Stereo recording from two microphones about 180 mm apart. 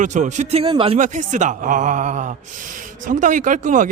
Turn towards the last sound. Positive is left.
turn(degrees=-45)  # may be behind; listen again after turning